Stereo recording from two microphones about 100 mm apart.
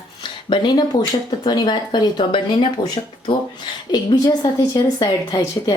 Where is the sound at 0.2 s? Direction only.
50° left (ahead or behind).